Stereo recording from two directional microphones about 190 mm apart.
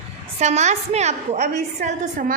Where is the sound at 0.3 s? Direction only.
35° right (ahead or behind).